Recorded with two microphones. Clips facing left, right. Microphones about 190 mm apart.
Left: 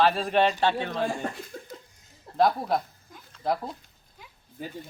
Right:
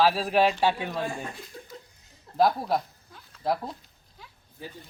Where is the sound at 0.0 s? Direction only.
Centre (ahead or behind).